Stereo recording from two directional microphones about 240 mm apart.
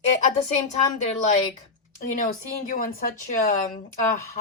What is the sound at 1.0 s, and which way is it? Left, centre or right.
Speech, left.